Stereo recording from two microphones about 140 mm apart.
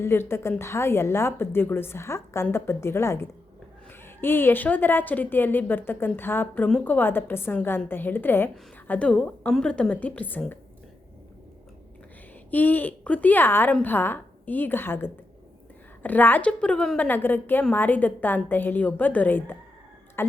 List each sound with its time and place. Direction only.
0.0 s a woman's voice: 15° left (ahead or behind)
12.5 s a woman's voice: 10° left (ahead or behind)